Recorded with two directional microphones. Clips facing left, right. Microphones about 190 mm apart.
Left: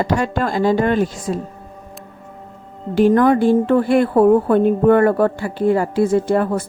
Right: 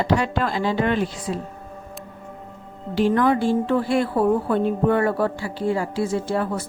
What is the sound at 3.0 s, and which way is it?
A woman's voice, 50° left (ahead or behind).